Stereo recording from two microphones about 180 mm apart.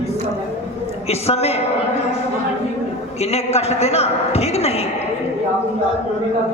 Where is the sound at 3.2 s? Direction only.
35° left (ahead or behind).